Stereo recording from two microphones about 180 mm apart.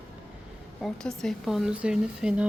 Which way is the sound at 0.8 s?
5° left (ahead or behind).